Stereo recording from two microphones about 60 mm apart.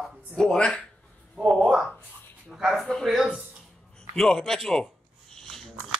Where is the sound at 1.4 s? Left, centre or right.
Centre.